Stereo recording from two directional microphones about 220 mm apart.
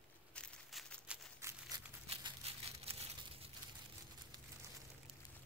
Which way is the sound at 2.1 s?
25° right (ahead or behind).